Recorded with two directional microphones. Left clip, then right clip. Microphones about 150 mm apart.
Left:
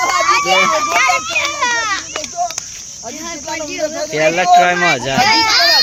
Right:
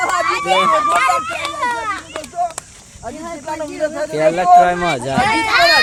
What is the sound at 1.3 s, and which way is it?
Children playing, 90° right.